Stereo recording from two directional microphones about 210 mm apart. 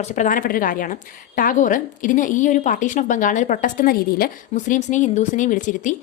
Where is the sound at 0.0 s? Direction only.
35° left (ahead or behind).